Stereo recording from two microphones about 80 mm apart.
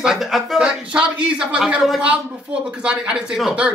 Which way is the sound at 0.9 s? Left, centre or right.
Centre.